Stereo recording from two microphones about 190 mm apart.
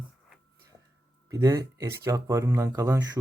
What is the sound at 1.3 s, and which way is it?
Speech, 15° right (ahead or behind).